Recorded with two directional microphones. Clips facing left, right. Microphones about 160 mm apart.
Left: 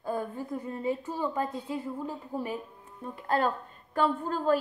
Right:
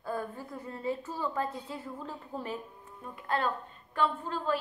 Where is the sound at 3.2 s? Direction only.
40° left (ahead or behind).